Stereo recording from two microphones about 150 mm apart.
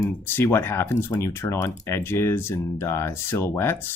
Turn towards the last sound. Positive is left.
turn(degrees=15)  # may be behind; listen again after turning